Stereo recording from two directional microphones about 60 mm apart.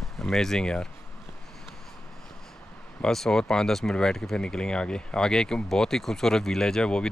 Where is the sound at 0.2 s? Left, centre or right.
Centre.